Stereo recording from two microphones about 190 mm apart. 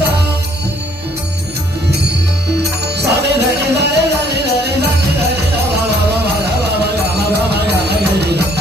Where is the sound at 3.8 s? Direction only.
60° right (ahead or behind).